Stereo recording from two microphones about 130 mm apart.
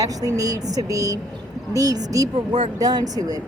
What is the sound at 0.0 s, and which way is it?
A woman's voice, 25° right (ahead or behind).